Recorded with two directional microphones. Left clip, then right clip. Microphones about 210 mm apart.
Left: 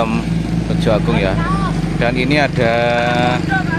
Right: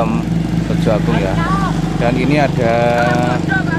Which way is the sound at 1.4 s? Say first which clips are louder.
Right 2 dB; 30° right (ahead or behind).